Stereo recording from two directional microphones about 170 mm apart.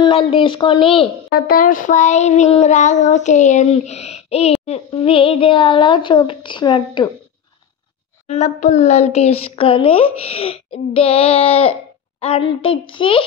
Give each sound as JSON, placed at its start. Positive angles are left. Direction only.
{"t": 0.0, "sound": "child singing", "side_deg": 30}
{"t": 1.3, "sound": "child singing", "side_deg": 55}
{"t": 8.3, "sound": "child singing", "side_deg": 45}